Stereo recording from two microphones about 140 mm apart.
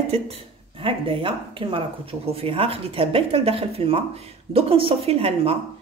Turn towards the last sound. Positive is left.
turn(degrees=-45)  # may be behind; listen again after turning